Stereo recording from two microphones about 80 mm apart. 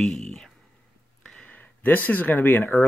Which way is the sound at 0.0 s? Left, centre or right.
Centre.